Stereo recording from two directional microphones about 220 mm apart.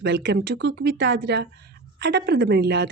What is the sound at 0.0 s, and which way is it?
Speech, 55° right (ahead or behind).